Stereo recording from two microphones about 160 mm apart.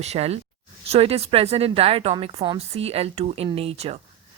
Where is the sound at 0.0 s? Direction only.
40° right (ahead or behind).